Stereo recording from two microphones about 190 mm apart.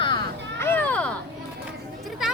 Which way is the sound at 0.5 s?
10° left (ahead or behind).